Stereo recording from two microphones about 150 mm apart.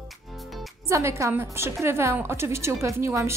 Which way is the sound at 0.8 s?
20° right (ahead or behind).